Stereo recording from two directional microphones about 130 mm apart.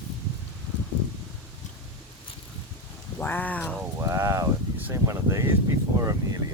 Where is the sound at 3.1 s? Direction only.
15° left (ahead or behind).